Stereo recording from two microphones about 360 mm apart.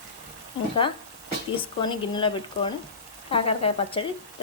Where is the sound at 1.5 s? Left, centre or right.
Centre.